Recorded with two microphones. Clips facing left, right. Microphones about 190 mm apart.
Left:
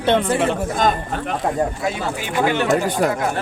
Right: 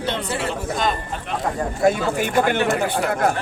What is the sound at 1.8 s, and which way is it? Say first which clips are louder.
Speech: right 5 dB; 50° right (ahead or behind).